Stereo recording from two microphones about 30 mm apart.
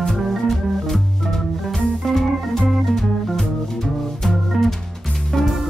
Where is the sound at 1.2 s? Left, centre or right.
Centre.